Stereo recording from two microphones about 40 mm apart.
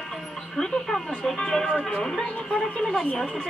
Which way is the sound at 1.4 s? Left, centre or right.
Centre.